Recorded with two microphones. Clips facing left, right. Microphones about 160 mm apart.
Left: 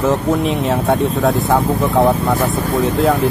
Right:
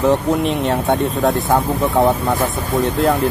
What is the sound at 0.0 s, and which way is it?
Speech, centre (ahead or behind).